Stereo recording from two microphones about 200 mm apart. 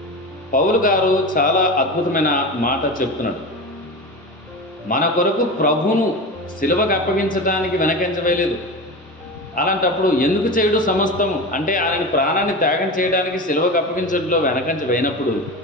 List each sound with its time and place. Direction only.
0.5 s a man's voice: 45° left (ahead or behind)
4.9 s a man's voice: 45° left (ahead or behind)
9.6 s a man's voice: 45° left (ahead or behind)